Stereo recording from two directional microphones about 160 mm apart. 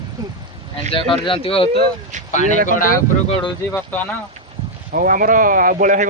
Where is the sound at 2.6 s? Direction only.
60° left (ahead or behind).